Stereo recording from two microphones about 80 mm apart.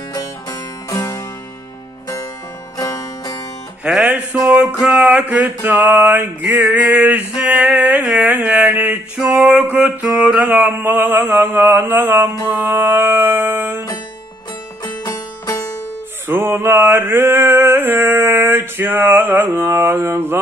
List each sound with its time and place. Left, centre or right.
0.1 s music: left
2.8 s music: left
3.8 s music: centre; by 13.8 s right
15.0 s music: left
16.3 s music: right